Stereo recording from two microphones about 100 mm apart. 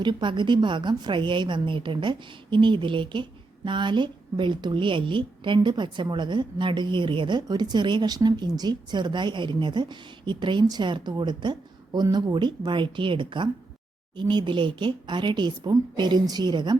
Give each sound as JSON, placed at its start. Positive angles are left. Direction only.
{"t": 0.0, "sound": "a woman's voice", "side_deg": -50}